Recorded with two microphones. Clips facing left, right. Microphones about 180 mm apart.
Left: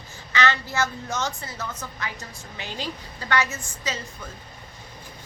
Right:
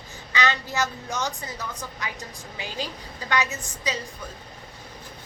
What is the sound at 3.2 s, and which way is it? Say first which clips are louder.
Speech: left 1 dB; 15° right (ahead or behind).